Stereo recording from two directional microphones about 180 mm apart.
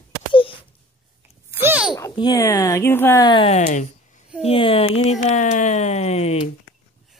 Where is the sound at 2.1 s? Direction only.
25° left (ahead or behind).